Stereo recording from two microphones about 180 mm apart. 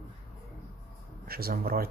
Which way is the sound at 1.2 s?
55° right (ahead or behind).